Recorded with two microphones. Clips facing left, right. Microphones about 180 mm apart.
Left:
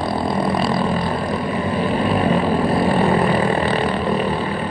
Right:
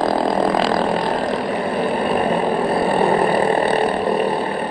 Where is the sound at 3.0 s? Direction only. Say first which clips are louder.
Right 1 dB; 35° right (ahead or behind).